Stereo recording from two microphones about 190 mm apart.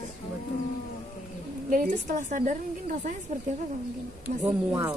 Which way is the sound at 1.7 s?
40° right (ahead or behind).